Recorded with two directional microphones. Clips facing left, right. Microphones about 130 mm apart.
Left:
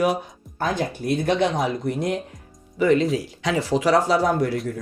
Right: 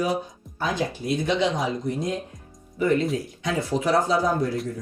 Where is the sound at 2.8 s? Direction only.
90° left.